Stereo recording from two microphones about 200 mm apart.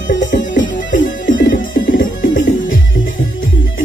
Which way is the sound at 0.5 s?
65° left (ahead or behind).